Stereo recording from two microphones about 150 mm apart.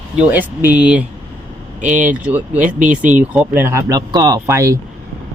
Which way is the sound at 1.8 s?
60° right (ahead or behind).